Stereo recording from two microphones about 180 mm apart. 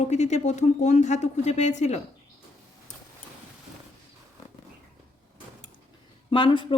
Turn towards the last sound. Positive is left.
turn(degrees=30)  # may be behind; listen again after turning